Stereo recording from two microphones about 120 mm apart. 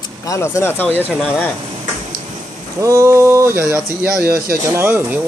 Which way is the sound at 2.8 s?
25° right (ahead or behind).